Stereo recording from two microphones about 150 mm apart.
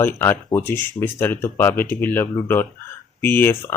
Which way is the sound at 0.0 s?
15° left (ahead or behind).